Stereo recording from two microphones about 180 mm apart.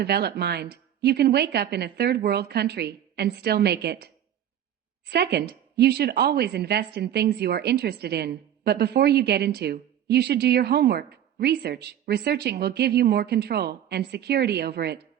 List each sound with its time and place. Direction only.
0.0 s a woman's voice: 65° right (ahead or behind)